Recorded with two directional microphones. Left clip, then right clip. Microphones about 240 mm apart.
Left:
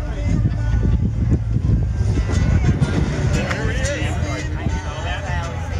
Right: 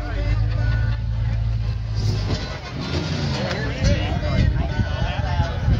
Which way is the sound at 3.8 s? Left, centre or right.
Left.